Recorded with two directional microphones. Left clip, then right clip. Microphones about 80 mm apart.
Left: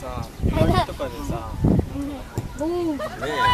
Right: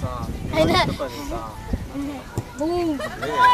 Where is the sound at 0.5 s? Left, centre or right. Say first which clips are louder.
Right 3 dB; right.